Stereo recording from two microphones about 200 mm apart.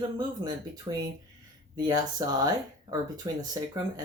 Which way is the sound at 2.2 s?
20° right (ahead or behind).